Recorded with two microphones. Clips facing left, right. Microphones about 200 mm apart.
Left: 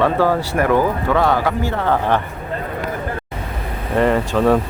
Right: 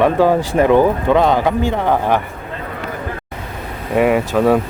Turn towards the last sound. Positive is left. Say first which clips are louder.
# right 2 dB
turn(degrees=-10)  # may be behind; listen again after turning